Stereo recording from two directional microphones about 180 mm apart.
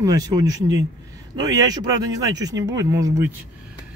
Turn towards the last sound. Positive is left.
turn(degrees=-15)  # may be behind; listen again after turning